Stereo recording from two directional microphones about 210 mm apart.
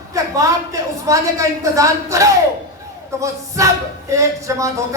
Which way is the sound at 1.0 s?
15° right (ahead or behind).